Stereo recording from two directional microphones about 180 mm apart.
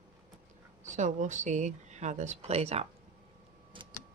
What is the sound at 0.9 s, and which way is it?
Speech, 40° right (ahead or behind).